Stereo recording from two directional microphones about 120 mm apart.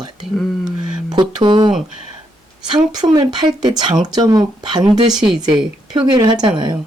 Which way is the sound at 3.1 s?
35° right (ahead or behind).